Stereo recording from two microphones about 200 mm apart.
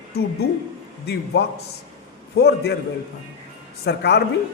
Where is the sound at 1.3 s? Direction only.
55° left (ahead or behind).